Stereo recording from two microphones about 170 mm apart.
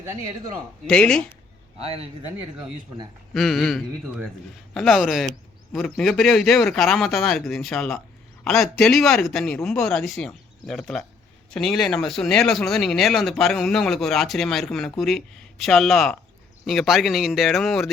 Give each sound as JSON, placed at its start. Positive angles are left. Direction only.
{"t": 0.9, "sound": "speech", "side_deg": 5}
{"t": 1.8, "sound": "speech", "side_deg": -35}
{"t": 3.3, "sound": "speech", "side_deg": 0}